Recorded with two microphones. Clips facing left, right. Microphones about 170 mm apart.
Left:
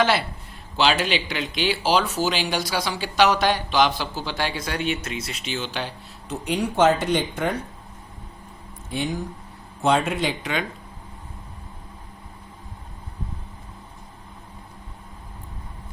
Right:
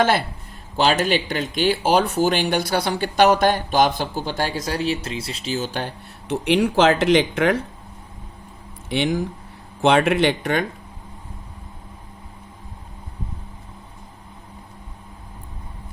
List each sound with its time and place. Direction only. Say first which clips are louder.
0.0 s speech: right 2 dB; 50° right (ahead or behind)
6.2 s speech: right 6 dB; 85° right
8.9 s speech: right 6 dB; 80° right; by 10.7 s 55° right (ahead or behind)